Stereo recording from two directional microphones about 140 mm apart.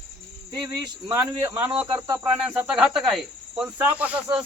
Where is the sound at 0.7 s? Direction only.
30° right (ahead or behind).